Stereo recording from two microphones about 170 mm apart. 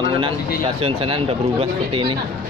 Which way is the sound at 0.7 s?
35° right (ahead or behind).